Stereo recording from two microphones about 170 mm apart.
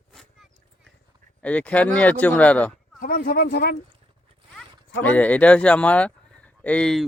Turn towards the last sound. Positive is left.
turn(degrees=5)  # may be behind; listen again after turning